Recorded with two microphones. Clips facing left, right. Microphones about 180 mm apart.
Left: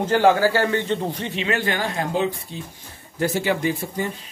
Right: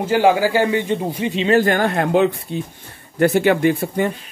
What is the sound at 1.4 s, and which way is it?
Speech, 40° right (ahead or behind).